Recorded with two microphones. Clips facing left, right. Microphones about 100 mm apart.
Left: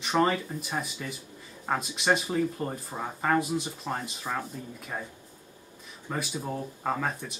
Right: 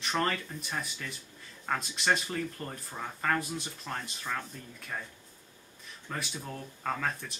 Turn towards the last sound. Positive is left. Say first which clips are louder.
# left 3 dB
turn(degrees=5)  # may be behind; listen again after turning